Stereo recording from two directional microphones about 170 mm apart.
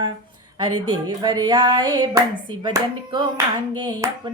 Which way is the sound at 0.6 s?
25° right (ahead or behind).